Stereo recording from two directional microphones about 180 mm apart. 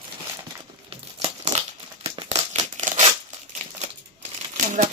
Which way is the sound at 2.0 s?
35° right (ahead or behind).